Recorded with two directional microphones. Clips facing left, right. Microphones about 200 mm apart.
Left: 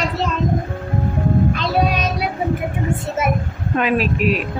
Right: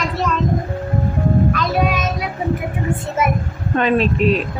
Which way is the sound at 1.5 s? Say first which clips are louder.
Even; 25° left (ahead or behind).